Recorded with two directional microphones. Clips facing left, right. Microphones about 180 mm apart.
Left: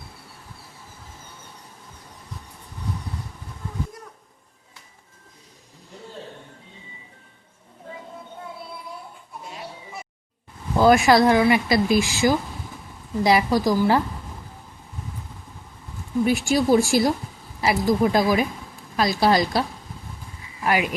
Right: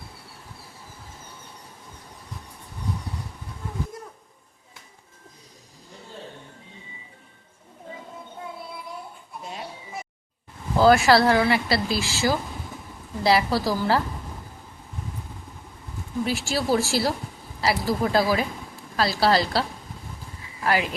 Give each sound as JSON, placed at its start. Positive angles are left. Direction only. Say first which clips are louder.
{"t": 10.8, "sound": "speech", "louder": "left 1 dB", "side_deg": 15}
{"t": 16.2, "sound": "speech", "louder": "left 6 dB", "side_deg": 15}
{"t": 20.7, "sound": "speech", "louder": "left 1 dB", "side_deg": 15}